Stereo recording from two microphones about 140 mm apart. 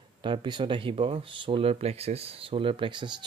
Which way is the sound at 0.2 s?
35° right (ahead or behind).